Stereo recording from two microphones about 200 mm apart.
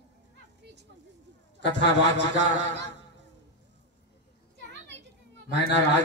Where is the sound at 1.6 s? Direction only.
60° left (ahead or behind).